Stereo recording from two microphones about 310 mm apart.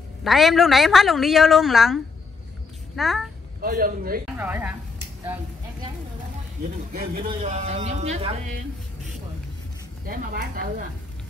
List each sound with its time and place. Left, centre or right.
0.2 s a woman's voice: centre
3.0 s a woman's voice: centre
3.6 s speech: right
4.4 s a woman's voice: centre
5.2 s a sound: centre
6.9 s speech: right
10.0 s speech: right